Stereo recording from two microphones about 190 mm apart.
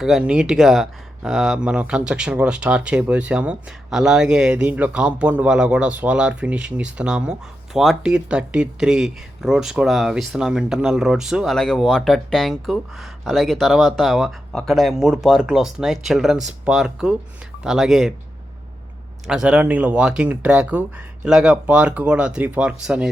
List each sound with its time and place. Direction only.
0.0 s speech: 5° right (ahead or behind)
19.3 s speech: 5° right (ahead or behind)